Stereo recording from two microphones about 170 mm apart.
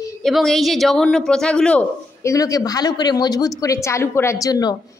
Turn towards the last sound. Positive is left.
turn(degrees=20)  # may be behind; listen again after turning